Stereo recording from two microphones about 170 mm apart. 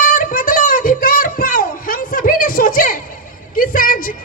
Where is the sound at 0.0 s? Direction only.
50° left (ahead or behind).